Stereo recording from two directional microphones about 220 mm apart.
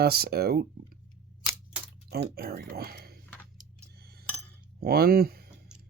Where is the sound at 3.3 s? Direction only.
5° left (ahead or behind).